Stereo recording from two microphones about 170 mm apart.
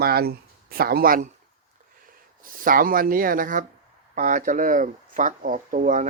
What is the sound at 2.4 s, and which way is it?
Speech, 55° right (ahead or behind).